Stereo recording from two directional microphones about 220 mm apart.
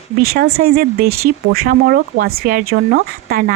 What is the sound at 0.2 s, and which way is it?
Speech, 45° right (ahead or behind).